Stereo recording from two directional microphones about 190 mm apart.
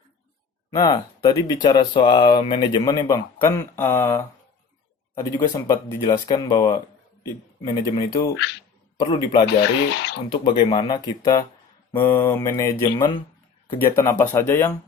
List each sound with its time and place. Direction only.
0.7 s speech: 20° left (ahead or behind)
9.5 s speech: 65° left (ahead or behind)
10.2 s speech: 25° left (ahead or behind)
11.9 s mantra: 15° left (ahead or behind)